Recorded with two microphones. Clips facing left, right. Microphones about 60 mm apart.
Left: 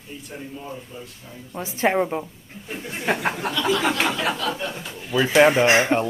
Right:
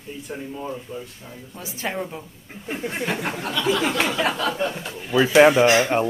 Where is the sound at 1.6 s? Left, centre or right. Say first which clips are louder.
Left 8 dB; left.